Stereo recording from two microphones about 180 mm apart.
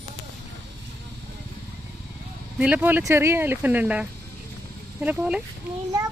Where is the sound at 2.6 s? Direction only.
10° right (ahead or behind).